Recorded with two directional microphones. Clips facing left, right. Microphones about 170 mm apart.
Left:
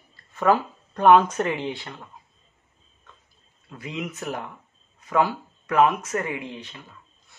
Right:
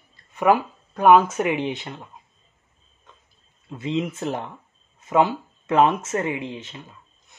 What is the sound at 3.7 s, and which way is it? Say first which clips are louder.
Speech: right 7 dB; 25° right (ahead or behind).